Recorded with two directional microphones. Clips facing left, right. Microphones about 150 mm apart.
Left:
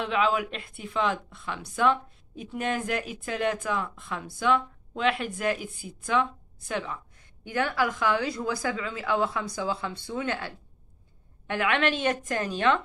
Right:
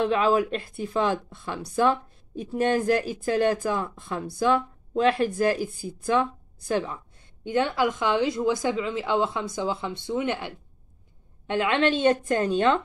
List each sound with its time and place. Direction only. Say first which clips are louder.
0.0 s speech: right 4 dB; 35° right (ahead or behind)